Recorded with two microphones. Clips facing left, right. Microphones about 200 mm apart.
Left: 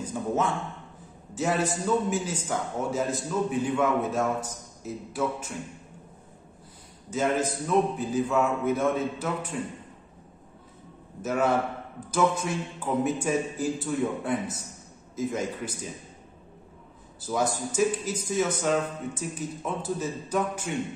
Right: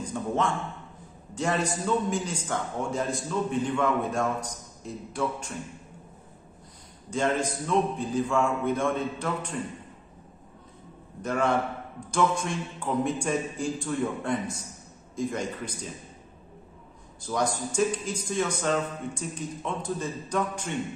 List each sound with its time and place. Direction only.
0.1 s a man's voice: 5° left (ahead or behind)
7.1 s a man's voice: 5° left (ahead or behind)
11.2 s a man's voice: 5° left (ahead or behind)
17.2 s speech: 5° left (ahead or behind)